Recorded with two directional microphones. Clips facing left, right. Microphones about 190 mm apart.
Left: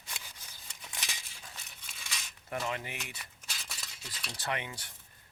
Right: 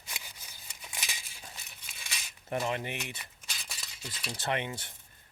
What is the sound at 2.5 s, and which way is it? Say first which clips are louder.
Speech: right 4 dB; 25° right (ahead or behind).